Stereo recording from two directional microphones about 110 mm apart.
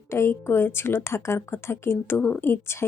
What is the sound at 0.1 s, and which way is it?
Speech, 25° left (ahead or behind).